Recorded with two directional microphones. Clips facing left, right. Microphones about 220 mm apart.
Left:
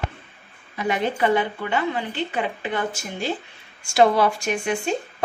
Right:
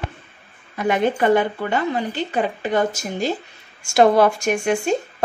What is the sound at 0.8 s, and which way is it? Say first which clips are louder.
Speech: right 4 dB; 50° right (ahead or behind).